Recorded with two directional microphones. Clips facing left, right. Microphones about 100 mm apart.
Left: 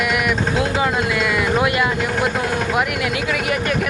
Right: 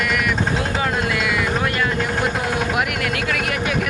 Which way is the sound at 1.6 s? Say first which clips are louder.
Left 2 dB; 10° left (ahead or behind).